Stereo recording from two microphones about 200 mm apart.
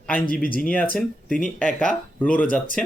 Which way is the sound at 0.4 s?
45° left (ahead or behind).